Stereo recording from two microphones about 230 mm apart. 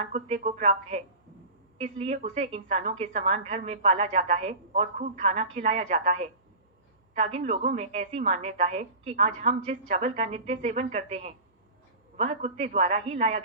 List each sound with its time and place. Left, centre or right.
0.0 s a woman's voice: right